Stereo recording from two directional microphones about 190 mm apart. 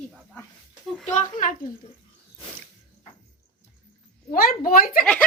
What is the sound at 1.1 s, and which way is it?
Speech, 45° left (ahead or behind).